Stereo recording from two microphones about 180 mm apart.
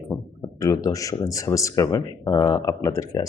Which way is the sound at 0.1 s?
10° left (ahead or behind).